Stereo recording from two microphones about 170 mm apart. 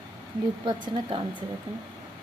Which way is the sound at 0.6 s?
30° right (ahead or behind).